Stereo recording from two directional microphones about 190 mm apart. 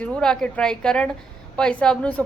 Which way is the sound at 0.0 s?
5° left (ahead or behind).